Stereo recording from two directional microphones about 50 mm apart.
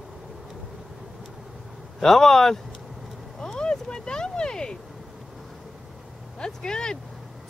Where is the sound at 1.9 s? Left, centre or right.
Centre.